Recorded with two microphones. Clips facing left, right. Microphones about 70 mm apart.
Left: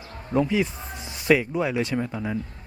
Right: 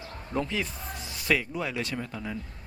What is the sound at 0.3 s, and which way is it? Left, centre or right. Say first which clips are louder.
Speech: left 8 dB; centre.